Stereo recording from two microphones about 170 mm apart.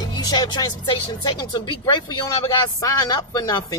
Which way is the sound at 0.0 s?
25° left (ahead or behind).